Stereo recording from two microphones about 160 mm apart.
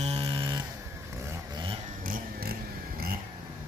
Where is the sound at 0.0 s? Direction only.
35° right (ahead or behind).